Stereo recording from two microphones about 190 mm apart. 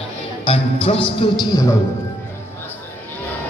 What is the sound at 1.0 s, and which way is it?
Speech, 25° left (ahead or behind).